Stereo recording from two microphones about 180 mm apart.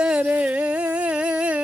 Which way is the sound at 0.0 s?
5° right (ahead or behind).